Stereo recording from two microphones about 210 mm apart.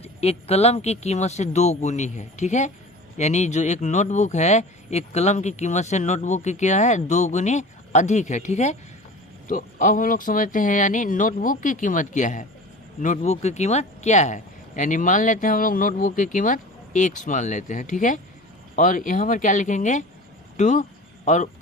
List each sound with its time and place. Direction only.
0.0 s speech: 30° left (ahead or behind)